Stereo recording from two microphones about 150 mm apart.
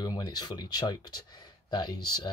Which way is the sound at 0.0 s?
25° left (ahead or behind).